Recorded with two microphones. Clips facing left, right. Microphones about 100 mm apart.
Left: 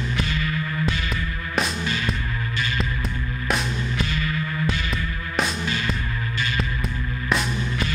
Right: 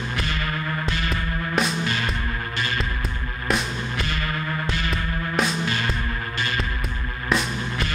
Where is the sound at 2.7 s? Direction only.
Centre (ahead or behind).